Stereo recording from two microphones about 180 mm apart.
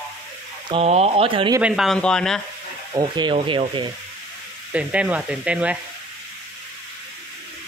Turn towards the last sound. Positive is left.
turn(degrees=-5)  # may be behind; listen again after turning